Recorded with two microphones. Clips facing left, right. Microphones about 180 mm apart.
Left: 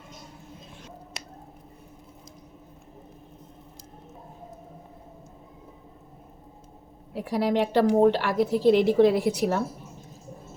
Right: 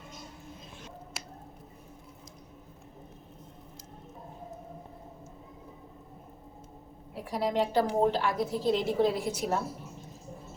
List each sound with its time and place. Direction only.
7.1 s a woman's voice: 80° left